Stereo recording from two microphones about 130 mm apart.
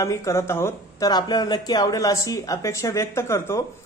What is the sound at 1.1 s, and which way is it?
Speech, 30° left (ahead or behind).